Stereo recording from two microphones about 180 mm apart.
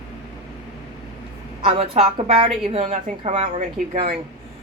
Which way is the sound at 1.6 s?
35° right (ahead or behind).